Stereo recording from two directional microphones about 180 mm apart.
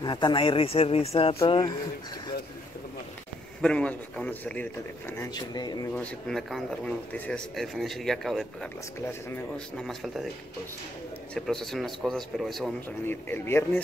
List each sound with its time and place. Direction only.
0.0 s speech: 25° left (ahead or behind)
3.6 s a man's voice: 5° left (ahead or behind); by 5.9 s 20° left (ahead or behind)
5.9 s speech: centre (ahead or behind)
9.0 s a man's voice: 10° left (ahead or behind)
9.8 s speech: centre (ahead or behind)
11.3 s speech: centre (ahead or behind)
13.0 s a man's voice: 10° left (ahead or behind)